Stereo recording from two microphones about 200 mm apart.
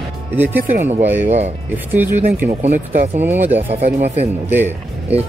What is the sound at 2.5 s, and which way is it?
Speech, 35° right (ahead or behind).